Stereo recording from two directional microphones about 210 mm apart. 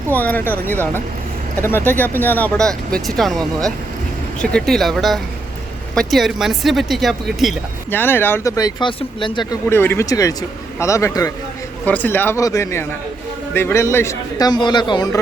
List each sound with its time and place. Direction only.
0.2 s speech: 10° left (ahead or behind)
7.9 s speech: 10° left (ahead or behind)